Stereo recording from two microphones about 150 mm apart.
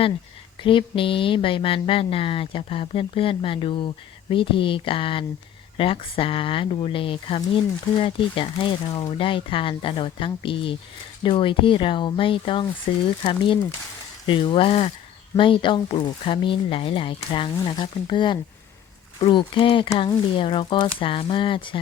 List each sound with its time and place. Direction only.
0.6 s speech: 35° left (ahead or behind)
14.3 s speech: 35° left (ahead or behind)